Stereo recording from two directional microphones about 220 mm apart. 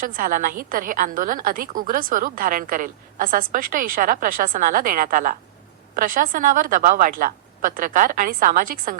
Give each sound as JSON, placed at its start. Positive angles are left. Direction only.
{"t": 0.0, "sound": "a woman's voice", "side_deg": -40}